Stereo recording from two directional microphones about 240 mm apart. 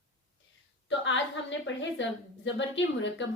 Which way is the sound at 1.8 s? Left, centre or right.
Left.